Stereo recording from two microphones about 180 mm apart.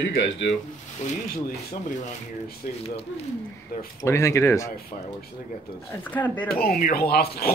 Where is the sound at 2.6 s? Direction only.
45° left (ahead or behind).